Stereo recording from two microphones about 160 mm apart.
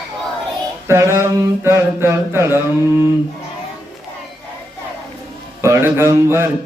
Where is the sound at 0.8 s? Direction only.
15° right (ahead or behind).